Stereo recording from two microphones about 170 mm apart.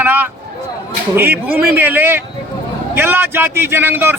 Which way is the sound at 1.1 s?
10° right (ahead or behind).